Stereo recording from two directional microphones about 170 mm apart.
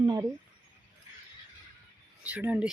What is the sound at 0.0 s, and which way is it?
Speech, 25° right (ahead or behind).